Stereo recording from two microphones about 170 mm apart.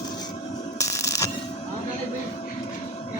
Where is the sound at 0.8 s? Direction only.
20° left (ahead or behind).